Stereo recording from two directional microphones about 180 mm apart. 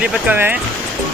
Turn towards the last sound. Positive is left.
turn(degrees=-10)  # may be behind; listen again after turning